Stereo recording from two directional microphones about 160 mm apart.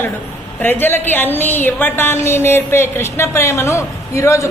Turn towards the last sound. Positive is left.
turn(degrees=20)  # may be behind; listen again after turning